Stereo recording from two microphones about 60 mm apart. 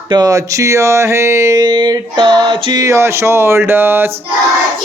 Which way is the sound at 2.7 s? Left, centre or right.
Right.